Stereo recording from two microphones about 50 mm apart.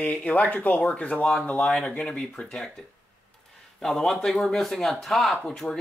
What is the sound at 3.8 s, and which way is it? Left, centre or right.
Speech, centre.